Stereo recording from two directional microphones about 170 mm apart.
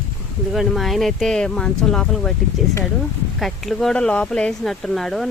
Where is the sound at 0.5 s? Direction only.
Centre (ahead or behind).